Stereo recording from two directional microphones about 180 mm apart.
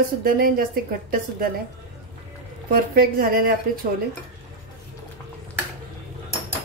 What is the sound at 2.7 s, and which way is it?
Speech, 55° right (ahead or behind).